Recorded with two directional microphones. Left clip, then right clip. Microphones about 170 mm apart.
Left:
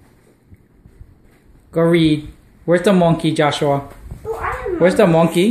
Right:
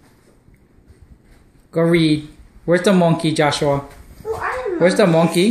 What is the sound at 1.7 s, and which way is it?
Speech, centre (ahead or behind).